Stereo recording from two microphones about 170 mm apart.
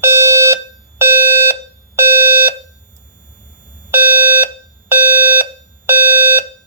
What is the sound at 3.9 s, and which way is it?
Alarm, 10° right (ahead or behind).